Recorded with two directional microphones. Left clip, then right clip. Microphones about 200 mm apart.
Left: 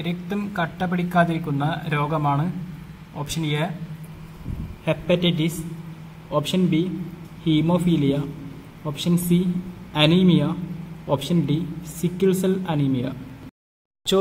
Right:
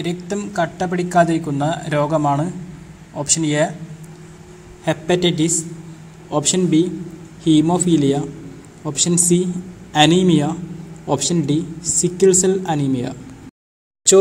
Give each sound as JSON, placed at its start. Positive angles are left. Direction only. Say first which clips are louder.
{"t": 0.0, "sound": "speech", "louder": "right 5 dB", "side_deg": -10}
{"t": 4.8, "sound": "speech", "louder": "right 4 dB", "side_deg": -15}